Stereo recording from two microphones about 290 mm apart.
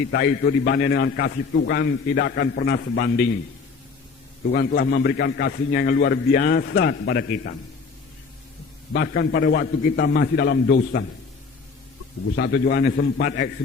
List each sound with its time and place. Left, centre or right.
0.1 s a man's voice: left
4.5 s a man's voice: left
8.9 s a man's voice: left
12.4 s a man's voice: left